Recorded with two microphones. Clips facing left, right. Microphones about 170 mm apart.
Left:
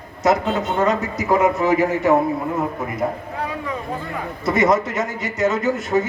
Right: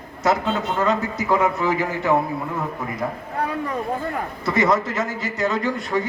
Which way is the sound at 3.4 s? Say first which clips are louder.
Right 4 dB; 50° right (ahead or behind).